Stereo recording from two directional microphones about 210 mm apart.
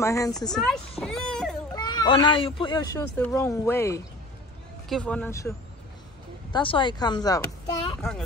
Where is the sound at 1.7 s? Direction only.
20° left (ahead or behind).